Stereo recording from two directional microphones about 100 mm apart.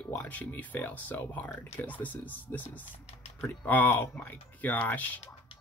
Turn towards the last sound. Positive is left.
turn(degrees=15)  # may be behind; listen again after turning